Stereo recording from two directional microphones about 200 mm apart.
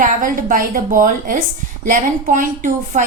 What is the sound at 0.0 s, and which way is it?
A woman's voice, 40° right (ahead or behind).